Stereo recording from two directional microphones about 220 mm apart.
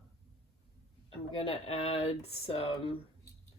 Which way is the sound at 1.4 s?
25° left (ahead or behind).